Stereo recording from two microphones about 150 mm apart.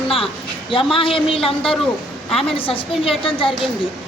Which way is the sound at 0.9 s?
35° left (ahead or behind).